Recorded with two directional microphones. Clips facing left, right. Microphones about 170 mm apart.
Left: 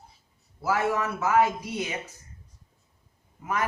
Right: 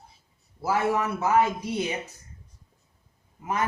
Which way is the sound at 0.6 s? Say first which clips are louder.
Right 1 dB; 25° right (ahead or behind).